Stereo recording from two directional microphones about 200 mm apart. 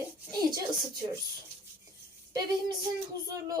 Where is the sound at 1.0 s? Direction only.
30° right (ahead or behind).